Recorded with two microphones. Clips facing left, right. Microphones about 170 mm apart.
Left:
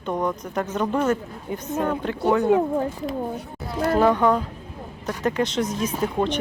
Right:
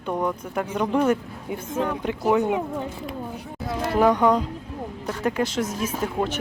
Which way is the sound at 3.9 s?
15° right (ahead or behind).